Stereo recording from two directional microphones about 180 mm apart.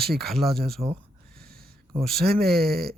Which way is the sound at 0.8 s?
20° right (ahead or behind).